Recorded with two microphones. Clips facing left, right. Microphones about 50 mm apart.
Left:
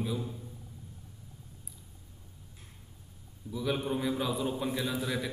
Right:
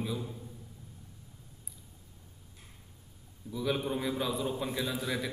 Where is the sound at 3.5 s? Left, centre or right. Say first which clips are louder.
Even; centre.